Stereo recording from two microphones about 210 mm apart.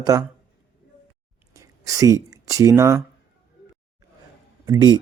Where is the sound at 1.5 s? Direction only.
15° right (ahead or behind).